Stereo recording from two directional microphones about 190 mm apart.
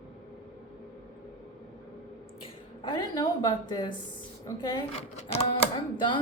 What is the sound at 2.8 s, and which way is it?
A woman's voice, 20° left (ahead or behind).